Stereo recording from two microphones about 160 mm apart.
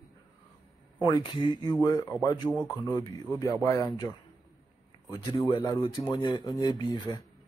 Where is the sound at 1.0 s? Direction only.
25° left (ahead or behind).